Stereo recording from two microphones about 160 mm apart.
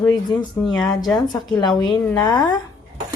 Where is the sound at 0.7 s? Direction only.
5° left (ahead or behind).